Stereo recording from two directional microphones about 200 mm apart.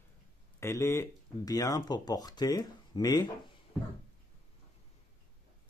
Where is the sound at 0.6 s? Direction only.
15° left (ahead or behind).